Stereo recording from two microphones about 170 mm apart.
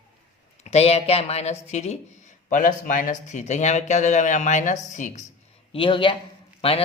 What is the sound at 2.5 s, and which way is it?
Speech, 50° left (ahead or behind).